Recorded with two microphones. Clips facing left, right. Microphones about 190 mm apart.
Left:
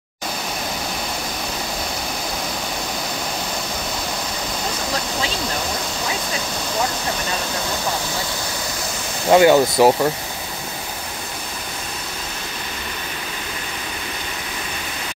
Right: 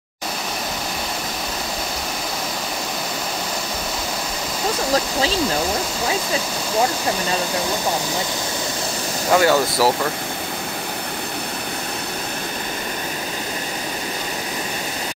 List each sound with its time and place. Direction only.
9.3 s speech: 20° left (ahead or behind)